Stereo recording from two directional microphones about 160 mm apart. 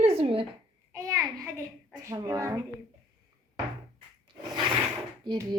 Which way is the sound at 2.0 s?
20° right (ahead or behind).